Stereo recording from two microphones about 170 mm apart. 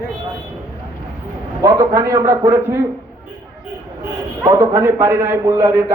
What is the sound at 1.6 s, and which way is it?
Speech, 15° right (ahead or behind).